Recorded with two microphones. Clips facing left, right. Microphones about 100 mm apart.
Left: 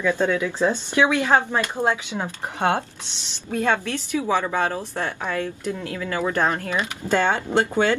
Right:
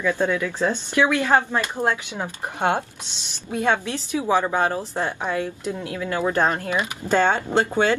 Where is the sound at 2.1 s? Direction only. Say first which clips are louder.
Left 1 dB; 15° right (ahead or behind).